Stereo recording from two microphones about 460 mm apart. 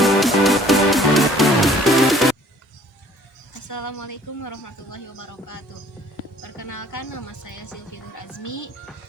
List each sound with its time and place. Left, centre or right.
0.0 s music: centre
3.5 s a woman's voice: left